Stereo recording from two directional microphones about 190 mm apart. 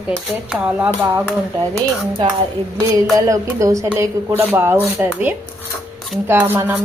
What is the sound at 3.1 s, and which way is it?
Speech, 15° right (ahead or behind).